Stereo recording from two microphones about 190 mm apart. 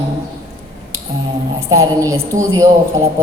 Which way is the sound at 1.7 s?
20° right (ahead or behind).